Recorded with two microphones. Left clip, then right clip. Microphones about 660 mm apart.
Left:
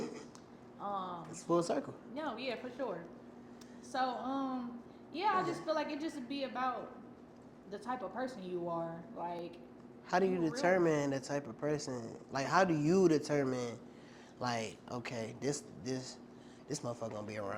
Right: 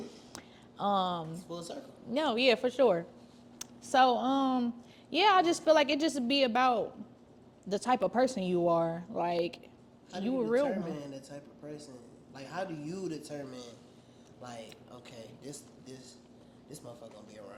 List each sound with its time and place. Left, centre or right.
0.3 s a sound: right
1.5 s a man's voice: left
2.1 s a woman's voice: right
10.1 s a man's voice: left